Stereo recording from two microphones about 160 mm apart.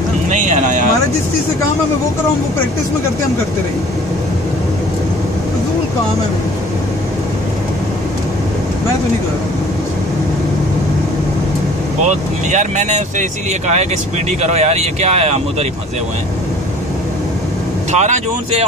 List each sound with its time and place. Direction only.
0.3 s a sound: 50° right (ahead or behind)
12.0 s speech: 45° right (ahead or behind)
17.9 s speech: 45° right (ahead or behind)